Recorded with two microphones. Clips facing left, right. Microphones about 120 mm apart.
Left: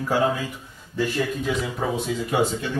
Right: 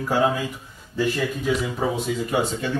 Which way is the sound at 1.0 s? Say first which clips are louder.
Right 1 dB; centre (ahead or behind).